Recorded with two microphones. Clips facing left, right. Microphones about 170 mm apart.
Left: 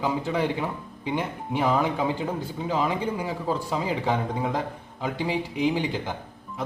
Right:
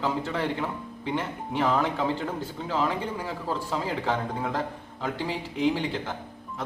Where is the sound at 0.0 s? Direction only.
10° left (ahead or behind).